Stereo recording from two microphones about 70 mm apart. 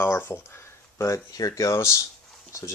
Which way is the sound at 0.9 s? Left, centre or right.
Left.